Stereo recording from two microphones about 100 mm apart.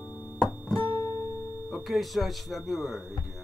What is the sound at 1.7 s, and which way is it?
Speech, centre (ahead or behind).